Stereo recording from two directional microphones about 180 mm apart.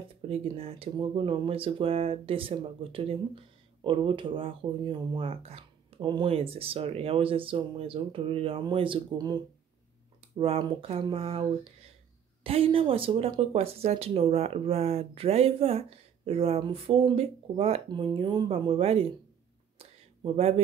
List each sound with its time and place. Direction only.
0.3 s speech: 35° right (ahead or behind)
20.3 s speech: 35° right (ahead or behind)